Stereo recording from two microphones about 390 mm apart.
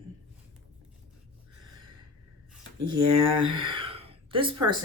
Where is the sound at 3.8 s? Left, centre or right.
Centre.